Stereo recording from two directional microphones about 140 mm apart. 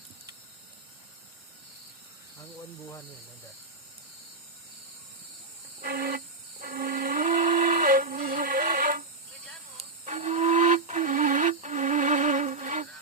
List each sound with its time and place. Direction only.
5.8 s music: 90° right
10.1 s music: 55° right (ahead or behind)